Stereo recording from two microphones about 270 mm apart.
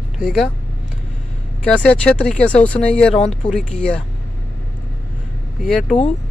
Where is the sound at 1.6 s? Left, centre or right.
Centre.